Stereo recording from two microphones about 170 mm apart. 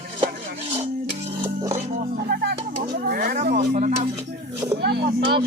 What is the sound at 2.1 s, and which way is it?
Music, 65° right (ahead or behind).